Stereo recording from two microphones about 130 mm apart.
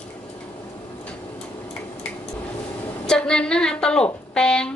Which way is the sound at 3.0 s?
5° left (ahead or behind).